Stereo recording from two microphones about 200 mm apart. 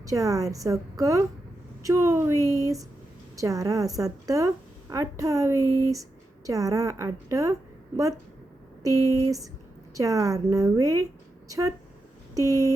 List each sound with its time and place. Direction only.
0.0 s a woman's voice: 15° right (ahead or behind)
8.8 s a woman's voice: 15° right (ahead or behind)